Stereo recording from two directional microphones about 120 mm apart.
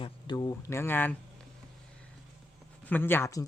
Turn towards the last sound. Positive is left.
turn(degrees=20)  # may be behind; listen again after turning